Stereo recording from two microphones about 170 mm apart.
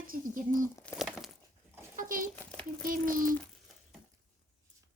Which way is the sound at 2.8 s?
55° right (ahead or behind).